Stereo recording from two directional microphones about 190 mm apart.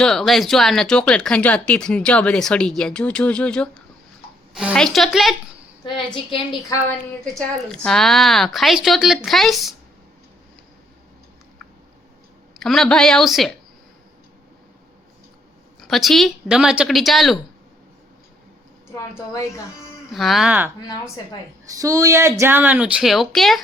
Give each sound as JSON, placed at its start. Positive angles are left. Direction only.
{"t": 0.0, "sound": "speech", "side_deg": 0}
{"t": 5.8, "sound": "a woman's voice", "side_deg": 25}
{"t": 7.3, "sound": "speech", "side_deg": 5}
{"t": 12.5, "sound": "speech", "side_deg": 0}
{"t": 15.8, "sound": "speech", "side_deg": 0}
{"t": 19.3, "sound": "speech", "side_deg": 15}
{"t": 20.1, "sound": "speech", "side_deg": 0}
{"t": 21.8, "sound": "speech", "side_deg": -15}